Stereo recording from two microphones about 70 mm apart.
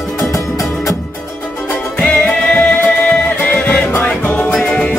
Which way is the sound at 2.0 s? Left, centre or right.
Centre.